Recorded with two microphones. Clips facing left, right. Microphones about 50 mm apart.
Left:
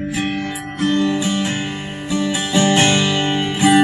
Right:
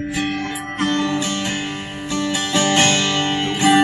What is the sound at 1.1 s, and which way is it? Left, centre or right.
Music, centre.